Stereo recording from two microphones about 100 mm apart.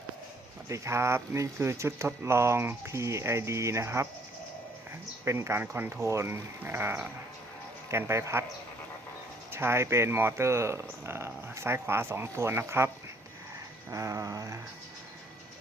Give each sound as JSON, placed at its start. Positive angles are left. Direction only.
{"t": 0.7, "sound": "speech", "side_deg": -25}
{"t": 5.2, "sound": "speech", "side_deg": -30}
{"t": 9.5, "sound": "speech", "side_deg": -25}
{"t": 13.9, "sound": "a sound", "side_deg": -35}